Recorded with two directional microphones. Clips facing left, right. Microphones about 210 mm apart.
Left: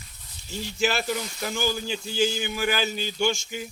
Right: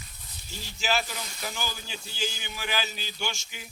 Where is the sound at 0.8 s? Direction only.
55° left (ahead or behind).